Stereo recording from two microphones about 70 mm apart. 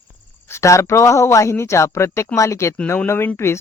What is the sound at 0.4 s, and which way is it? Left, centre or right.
Speech, left.